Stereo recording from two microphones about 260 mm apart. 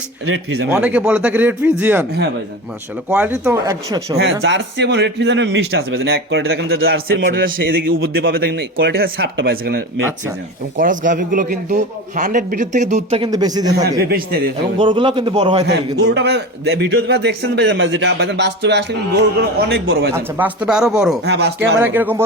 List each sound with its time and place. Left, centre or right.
0.7 s speech: centre
3.1 s speech: centre
4.4 s a man's voice: right; by 13.8 s centre
14.0 s a man's voice: right
14.8 s a man's voice: centre
15.6 s a man's voice: right
20.1 s speech: centre
21.2 s a man's voice: right
21.8 s speech: centre